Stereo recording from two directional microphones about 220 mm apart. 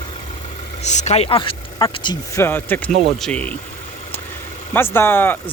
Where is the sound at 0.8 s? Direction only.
30° left (ahead or behind); by 3.5 s 5° left (ahead or behind).